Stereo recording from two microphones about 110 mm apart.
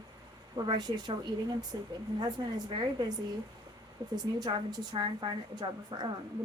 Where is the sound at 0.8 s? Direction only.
40° right (ahead or behind).